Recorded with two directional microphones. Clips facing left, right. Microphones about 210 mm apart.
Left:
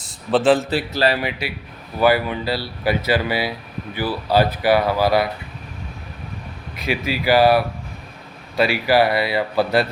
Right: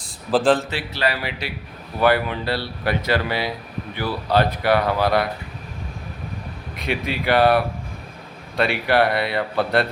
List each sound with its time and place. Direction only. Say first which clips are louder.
0.0 s a sound: left 1 dB; centre (ahead or behind)
0.7 s speech: left 5 dB; 35° left (ahead or behind)
2.0 s speech: left 2 dB; 5° left (ahead or behind)
6.7 s speech: left 2 dB; 5° left (ahead or behind)